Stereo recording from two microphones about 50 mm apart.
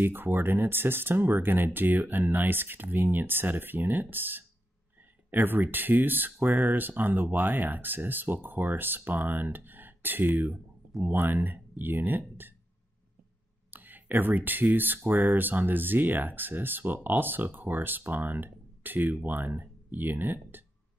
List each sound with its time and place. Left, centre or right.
0.0 s speech: right
13.7 s speech: right